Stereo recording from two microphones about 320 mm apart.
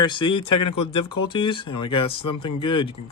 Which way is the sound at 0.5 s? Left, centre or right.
Left.